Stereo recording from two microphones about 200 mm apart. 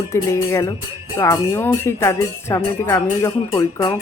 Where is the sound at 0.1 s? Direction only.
15° left (ahead or behind).